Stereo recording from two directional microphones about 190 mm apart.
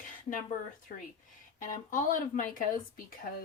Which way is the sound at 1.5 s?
45° left (ahead or behind).